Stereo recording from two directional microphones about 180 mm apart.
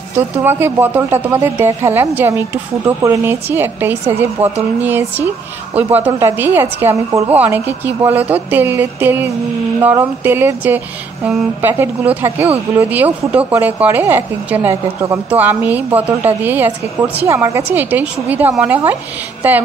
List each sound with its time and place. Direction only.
0.4 s speech: 10° right (ahead or behind)